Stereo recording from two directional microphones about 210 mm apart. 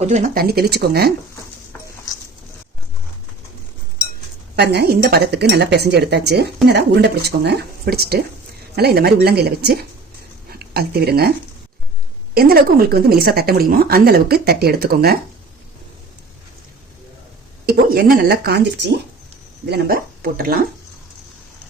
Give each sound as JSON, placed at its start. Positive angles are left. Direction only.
{"t": 0.0, "sound": "speech", "side_deg": -35}
{"t": 4.5, "sound": "speech", "side_deg": -50}
{"t": 17.7, "sound": "speech", "side_deg": -45}